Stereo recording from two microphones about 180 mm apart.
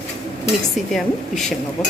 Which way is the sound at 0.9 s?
Centre (ahead or behind).